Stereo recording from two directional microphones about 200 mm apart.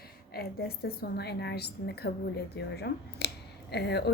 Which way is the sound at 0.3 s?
50° left (ahead or behind).